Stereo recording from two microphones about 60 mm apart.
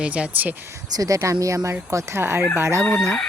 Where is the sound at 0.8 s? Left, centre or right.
Right.